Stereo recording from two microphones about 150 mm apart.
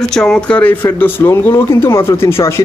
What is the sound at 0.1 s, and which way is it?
Speech, 5° left (ahead or behind).